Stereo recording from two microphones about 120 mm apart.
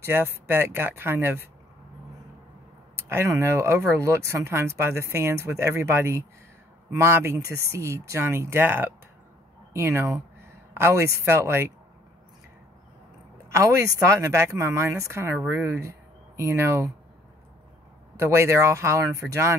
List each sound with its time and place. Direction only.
0.0 s speech: 20° right (ahead or behind)
3.0 s speech: 20° right (ahead or behind)
13.5 s speech: 25° right (ahead or behind)
18.2 s speech: 20° right (ahead or behind)